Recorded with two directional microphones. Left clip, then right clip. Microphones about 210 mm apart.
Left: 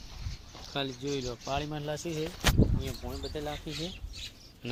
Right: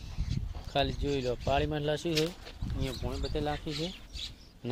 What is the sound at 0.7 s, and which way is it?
Speech, 45° right (ahead or behind).